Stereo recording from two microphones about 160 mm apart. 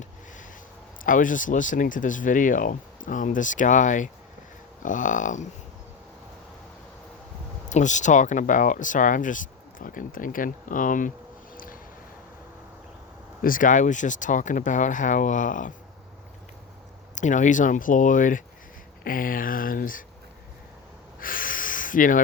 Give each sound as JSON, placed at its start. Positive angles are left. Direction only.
{"t": 1.0, "sound": "speech", "side_deg": 55}
{"t": 7.7, "sound": "speech", "side_deg": 50}
{"t": 11.5, "sound": "a sound", "side_deg": 60}
{"t": 13.4, "sound": "speech", "side_deg": 60}
{"t": 17.2, "sound": "speech", "side_deg": 50}
{"t": 21.2, "sound": "snort", "side_deg": 60}